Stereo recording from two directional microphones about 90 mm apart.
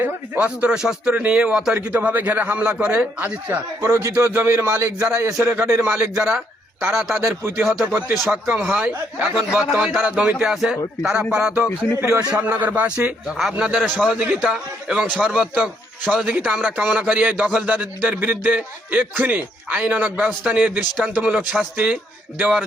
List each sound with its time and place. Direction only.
0.3 s speech: 15° right (ahead or behind)
3.8 s a man's voice: 40° right (ahead or behind)
5.8 s a man's voice: 15° right (ahead or behind)
7.2 s speech: 25° right (ahead or behind)
9.5 s a man's voice: 5° right (ahead or behind)
11.9 s speech: 30° right (ahead or behind)
12.4 s speech: 20° right (ahead or behind)
13.7 s a man's voice: 5° left (ahead or behind)
14.2 s speech: 10° right (ahead or behind)